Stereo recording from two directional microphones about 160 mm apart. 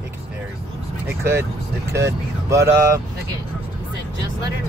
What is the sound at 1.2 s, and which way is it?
Speech, 15° right (ahead or behind).